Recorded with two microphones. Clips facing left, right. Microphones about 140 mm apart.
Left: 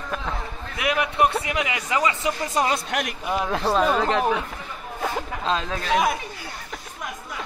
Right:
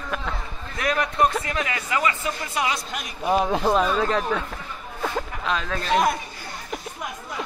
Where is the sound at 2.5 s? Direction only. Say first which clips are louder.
Left 3 dB; 45° left (ahead or behind).